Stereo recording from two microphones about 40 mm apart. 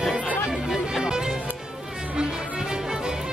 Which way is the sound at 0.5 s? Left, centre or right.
Centre.